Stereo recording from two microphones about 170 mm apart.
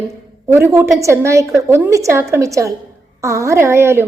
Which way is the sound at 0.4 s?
15° right (ahead or behind).